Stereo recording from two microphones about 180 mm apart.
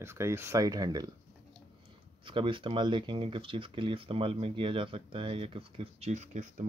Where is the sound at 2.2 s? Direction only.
30° right (ahead or behind).